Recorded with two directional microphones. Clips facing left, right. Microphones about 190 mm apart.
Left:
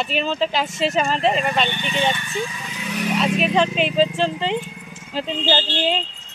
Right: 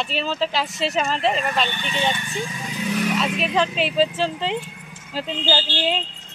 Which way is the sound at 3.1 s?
Centre (ahead or behind).